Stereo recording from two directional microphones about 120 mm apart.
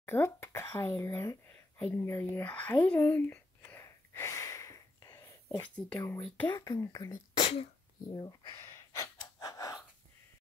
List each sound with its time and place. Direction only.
0.0 s a sound: 20° left (ahead or behind)
5.6 s speech: 10° left (ahead or behind)
5.9 s speech: 20° left (ahead or behind)
6.4 s speech: 35° left (ahead or behind)
7.3 s sneeze: 60° left (ahead or behind)
8.1 s speech: 35° left (ahead or behind)
8.5 s gasp: 20° left (ahead or behind)